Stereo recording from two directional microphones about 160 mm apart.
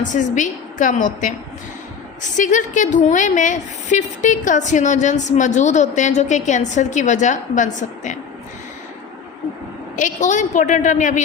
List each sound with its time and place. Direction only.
0.0 s a woman's voice: 50° left (ahead or behind)
2.3 s a woman's voice: 50° left (ahead or behind)
9.9 s a woman's voice: 50° left (ahead or behind)